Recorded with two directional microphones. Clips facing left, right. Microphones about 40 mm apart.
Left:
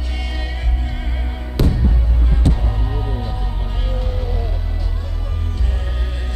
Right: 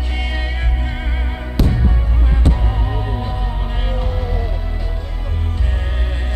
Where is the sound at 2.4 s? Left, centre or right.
Right.